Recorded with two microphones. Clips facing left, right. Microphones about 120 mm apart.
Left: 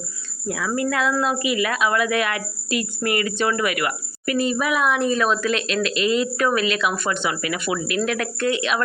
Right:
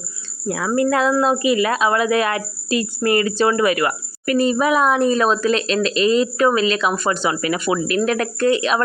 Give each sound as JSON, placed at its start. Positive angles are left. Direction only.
{"t": 0.4, "sound": "a woman's voice", "side_deg": -40}